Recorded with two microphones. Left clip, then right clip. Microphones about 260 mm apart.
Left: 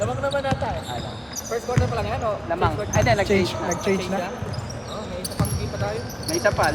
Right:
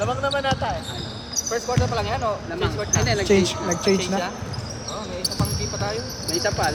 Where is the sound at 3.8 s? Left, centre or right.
Right.